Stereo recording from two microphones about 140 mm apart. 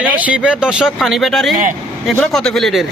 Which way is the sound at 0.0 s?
10° right (ahead or behind).